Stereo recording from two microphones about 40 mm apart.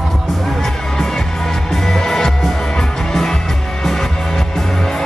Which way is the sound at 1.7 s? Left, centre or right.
Centre.